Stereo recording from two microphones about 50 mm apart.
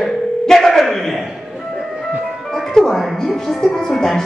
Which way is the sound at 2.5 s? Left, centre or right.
Centre.